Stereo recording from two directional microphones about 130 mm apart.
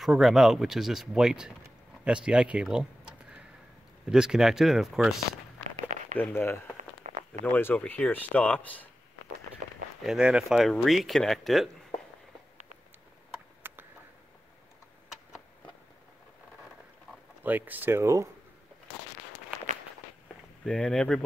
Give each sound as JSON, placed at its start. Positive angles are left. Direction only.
{"t": 0.0, "sound": "speech", "side_deg": 0}
{"t": 2.0, "sound": "a sound", "side_deg": -5}
{"t": 4.1, "sound": "speech", "side_deg": -5}
{"t": 6.1, "sound": "speech", "side_deg": 15}
{"t": 6.8, "sound": "a sound", "side_deg": -70}
{"t": 7.5, "sound": "speech", "side_deg": 10}
{"t": 10.0, "sound": "speech", "side_deg": -5}
{"t": 13.6, "sound": "a sound", "side_deg": -15}
{"t": 17.4, "sound": "speech", "side_deg": -15}
{"t": 20.6, "sound": "speech", "side_deg": 5}